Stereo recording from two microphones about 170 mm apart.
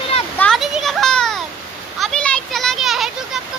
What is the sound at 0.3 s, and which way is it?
Children playing, 5° left (ahead or behind).